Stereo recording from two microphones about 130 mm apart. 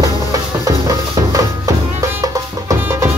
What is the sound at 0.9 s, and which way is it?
Music, 25° right (ahead or behind).